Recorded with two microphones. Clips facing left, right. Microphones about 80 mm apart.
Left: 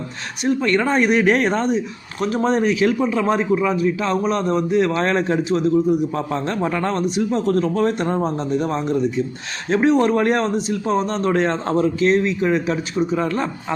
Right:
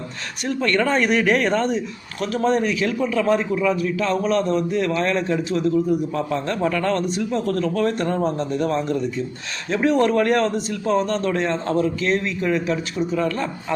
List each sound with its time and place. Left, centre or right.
0.4 s a man's voice: centre
9.6 s speech: left
9.9 s a man's voice: left